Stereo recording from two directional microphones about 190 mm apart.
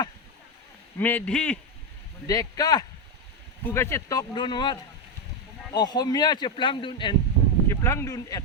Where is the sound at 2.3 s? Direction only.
20° left (ahead or behind).